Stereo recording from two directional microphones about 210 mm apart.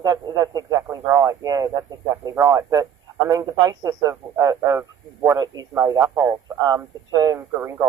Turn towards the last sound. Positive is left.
turn(degrees=-15)  # may be behind; listen again after turning